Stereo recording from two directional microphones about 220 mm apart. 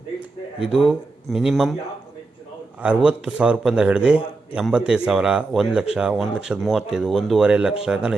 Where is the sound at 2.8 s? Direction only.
5° right (ahead or behind).